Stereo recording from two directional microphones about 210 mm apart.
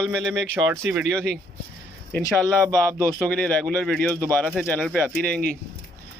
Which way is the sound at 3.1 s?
5° left (ahead or behind).